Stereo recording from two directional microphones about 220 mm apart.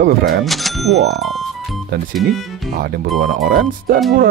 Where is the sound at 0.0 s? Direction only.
45° right (ahead or behind).